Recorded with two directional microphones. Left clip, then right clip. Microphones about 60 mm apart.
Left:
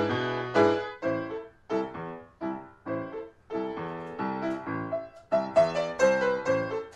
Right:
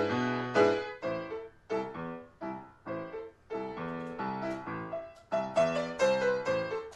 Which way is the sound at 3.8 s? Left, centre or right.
Centre.